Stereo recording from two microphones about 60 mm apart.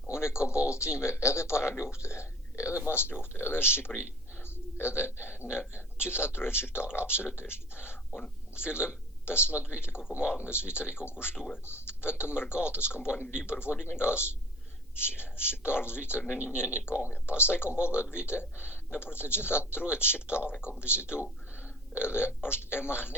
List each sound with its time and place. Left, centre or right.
0.1 s speech: left
3.0 s speech: left
8.6 s speech: left
10.0 s speech: centre
10.3 s speech: left